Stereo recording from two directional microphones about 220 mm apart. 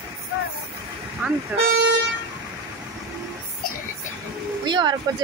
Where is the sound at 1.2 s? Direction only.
5° right (ahead or behind).